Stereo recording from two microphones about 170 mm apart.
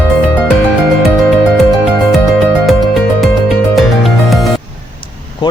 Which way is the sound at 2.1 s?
Centre (ahead or behind).